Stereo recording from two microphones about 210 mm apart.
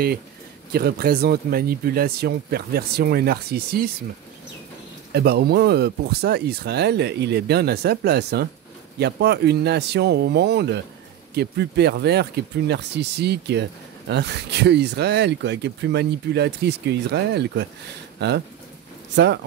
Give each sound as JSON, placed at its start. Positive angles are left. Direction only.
{"t": 0.7, "sound": "speech", "side_deg": -50}
{"t": 5.1, "sound": "speech", "side_deg": -50}